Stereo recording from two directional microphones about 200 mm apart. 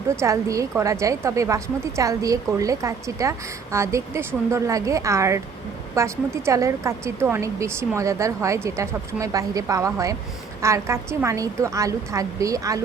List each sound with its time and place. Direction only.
0.2 s a woman's voice: 15° right (ahead or behind)